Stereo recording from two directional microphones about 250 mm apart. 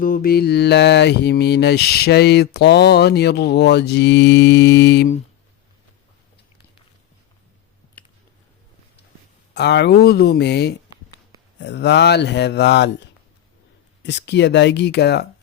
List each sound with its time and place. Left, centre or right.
0.0 s mantra: left
8.0 s a sound: centre
9.6 s mantra: left
11.6 s speech: left